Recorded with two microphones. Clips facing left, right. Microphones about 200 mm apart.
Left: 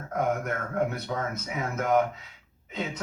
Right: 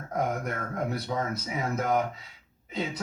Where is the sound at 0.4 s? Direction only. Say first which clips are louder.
Left 3 dB; 35° right (ahead or behind).